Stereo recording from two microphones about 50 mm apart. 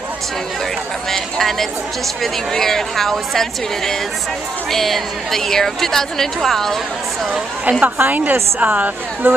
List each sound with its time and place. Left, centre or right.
1.1 s a woman's voice: centre
7.8 s a woman's voice: right